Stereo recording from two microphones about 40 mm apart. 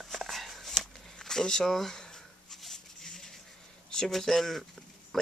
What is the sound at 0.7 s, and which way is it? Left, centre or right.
Shuffling cards, centre.